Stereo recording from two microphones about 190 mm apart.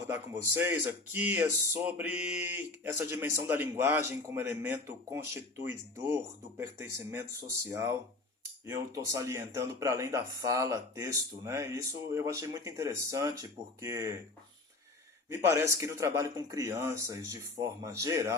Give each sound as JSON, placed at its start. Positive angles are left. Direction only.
{"t": 0.1, "sound": "speech", "side_deg": -15}
{"t": 15.3, "sound": "speech", "side_deg": -15}